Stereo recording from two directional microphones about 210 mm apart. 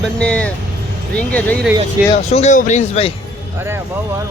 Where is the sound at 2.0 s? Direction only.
10° right (ahead or behind).